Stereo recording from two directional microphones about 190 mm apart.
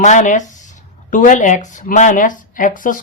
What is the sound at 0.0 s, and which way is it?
A woman's voice, 40° left (ahead or behind).